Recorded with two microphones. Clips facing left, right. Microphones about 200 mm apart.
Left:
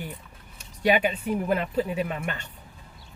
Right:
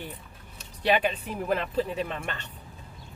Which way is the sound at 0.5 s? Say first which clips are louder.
Left 2 dB; 10° left (ahead or behind).